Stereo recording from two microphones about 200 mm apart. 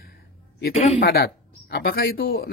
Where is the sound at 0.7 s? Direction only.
30° left (ahead or behind).